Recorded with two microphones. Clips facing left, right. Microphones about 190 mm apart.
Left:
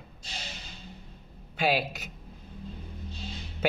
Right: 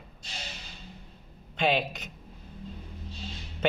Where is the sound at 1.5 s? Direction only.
5° left (ahead or behind).